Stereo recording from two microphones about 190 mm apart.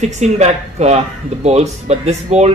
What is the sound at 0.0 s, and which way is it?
Speech, 35° right (ahead or behind).